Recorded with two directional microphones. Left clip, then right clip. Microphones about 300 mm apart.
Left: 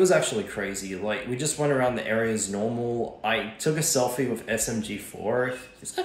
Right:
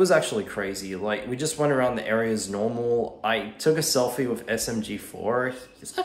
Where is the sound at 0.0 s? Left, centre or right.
Centre.